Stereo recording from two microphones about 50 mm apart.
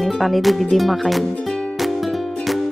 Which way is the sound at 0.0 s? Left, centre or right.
Centre.